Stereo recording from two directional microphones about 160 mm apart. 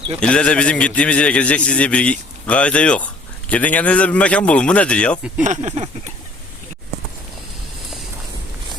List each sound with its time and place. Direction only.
0.2 s a man's voice: 5° left (ahead or behind)
5.4 s speech: 50° right (ahead or behind)